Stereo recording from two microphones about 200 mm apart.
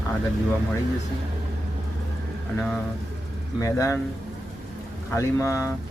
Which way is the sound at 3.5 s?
15° left (ahead or behind).